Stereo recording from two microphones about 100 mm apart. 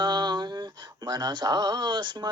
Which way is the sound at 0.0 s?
50° right (ahead or behind).